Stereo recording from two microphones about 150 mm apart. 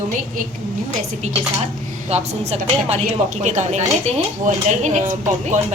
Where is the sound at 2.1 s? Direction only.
45° right (ahead or behind).